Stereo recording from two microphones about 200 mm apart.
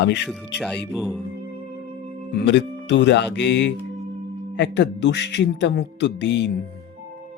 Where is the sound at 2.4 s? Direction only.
60° left (ahead or behind).